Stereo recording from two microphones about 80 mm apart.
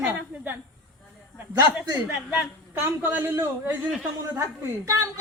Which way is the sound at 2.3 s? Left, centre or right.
Right.